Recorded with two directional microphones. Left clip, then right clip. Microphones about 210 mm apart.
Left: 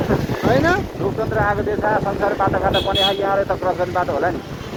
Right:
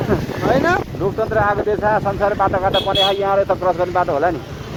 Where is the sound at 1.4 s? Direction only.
45° right (ahead or behind).